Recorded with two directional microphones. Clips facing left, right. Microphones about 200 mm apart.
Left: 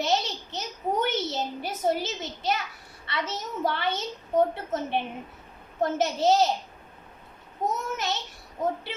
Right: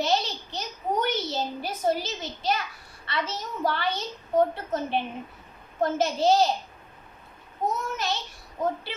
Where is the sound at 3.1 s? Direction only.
20° left (ahead or behind).